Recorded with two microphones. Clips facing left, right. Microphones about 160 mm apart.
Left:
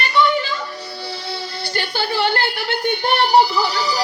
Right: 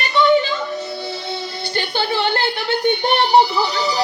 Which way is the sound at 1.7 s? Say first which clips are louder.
Right 2 dB; 20° right (ahead or behind).